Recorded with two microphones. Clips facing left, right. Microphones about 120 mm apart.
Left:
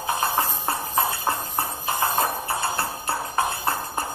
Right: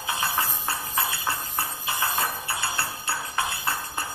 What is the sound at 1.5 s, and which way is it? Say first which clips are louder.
Music: left 4 dB; 25° left (ahead or behind).